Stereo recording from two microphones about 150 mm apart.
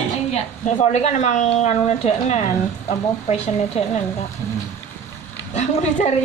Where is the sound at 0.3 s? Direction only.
50° left (ahead or behind).